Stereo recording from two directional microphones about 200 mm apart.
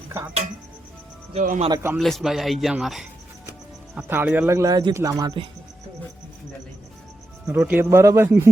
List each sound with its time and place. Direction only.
1.3 s speech: 35° right (ahead or behind)
1.7 s a man's voice: 10° right (ahead or behind)
2.0 s a man's voice: centre (ahead or behind); by 5.5 s 20° right (ahead or behind)
7.4 s a man's voice: 10° right (ahead or behind)